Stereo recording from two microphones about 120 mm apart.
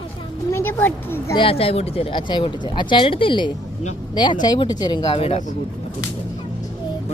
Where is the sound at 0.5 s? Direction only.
20° left (ahead or behind).